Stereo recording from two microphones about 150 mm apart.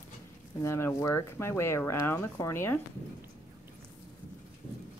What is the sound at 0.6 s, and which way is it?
Speech, 15° left (ahead or behind).